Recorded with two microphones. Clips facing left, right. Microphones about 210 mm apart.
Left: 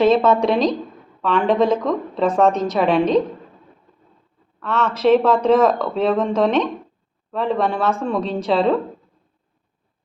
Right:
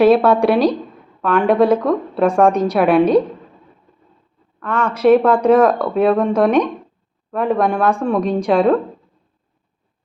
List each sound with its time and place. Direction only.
0.0 s a woman's voice: 10° right (ahead or behind)
4.6 s a woman's voice: 10° right (ahead or behind)